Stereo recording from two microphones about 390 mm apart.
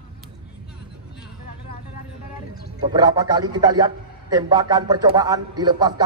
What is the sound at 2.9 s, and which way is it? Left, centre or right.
A man's voice, centre.